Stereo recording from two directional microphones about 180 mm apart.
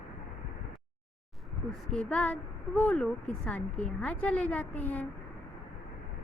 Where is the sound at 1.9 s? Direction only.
5° left (ahead or behind).